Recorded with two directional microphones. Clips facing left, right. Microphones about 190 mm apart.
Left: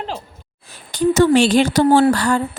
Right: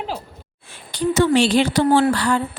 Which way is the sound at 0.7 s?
45° left (ahead or behind).